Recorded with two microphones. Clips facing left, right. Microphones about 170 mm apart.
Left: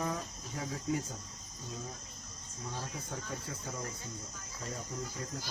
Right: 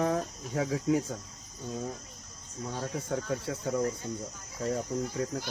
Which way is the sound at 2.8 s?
70° right (ahead or behind).